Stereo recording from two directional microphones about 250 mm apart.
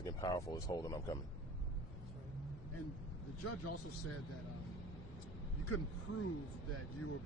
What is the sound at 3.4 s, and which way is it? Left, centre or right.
Speech, left.